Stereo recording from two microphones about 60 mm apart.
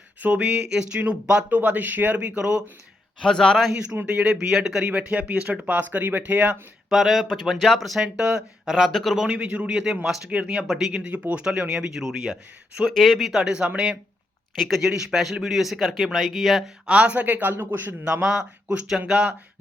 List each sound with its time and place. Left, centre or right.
0.2 s speech: right
0.4 s speech: centre
3.2 s a man's voice: centre
4.0 s speech: centre
4.9 s speech: centre
6.9 s speech: centre
8.0 s speech: centre
8.7 s speech: centre
9.2 s speech: centre
11.1 s speech: right
11.7 s speech: centre
14.5 s speech: centre
16.8 s speech: centre; by 17.9 s right
18.0 s speech: centre